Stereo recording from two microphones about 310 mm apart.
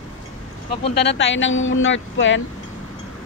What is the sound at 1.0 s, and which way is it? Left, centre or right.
Speech, left.